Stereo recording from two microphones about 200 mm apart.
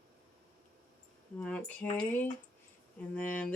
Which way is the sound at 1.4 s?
5° left (ahead or behind).